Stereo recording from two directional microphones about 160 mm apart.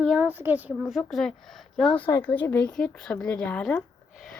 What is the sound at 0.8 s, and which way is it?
Speech, centre (ahead or behind).